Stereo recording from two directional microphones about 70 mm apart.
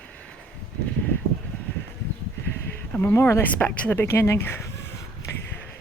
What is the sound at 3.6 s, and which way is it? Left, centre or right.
Speech, left.